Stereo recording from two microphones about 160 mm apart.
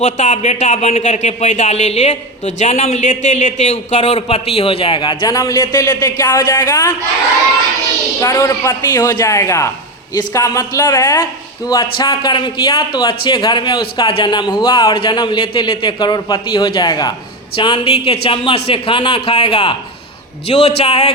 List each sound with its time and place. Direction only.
0.0 s speech: 45° left (ahead or behind); by 6.9 s 20° left (ahead or behind)
8.2 s a man's voice: 20° left (ahead or behind); by 21.1 s 40° left (ahead or behind)